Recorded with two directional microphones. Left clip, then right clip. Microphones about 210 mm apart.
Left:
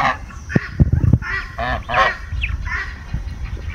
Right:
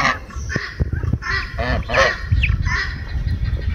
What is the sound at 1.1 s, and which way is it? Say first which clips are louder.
Goose: left 4 dB; centre (ahead or behind).